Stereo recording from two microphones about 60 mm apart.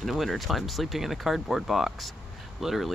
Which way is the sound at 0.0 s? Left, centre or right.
Centre.